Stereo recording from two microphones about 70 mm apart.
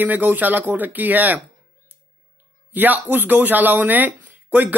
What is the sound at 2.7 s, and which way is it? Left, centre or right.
Speech, right.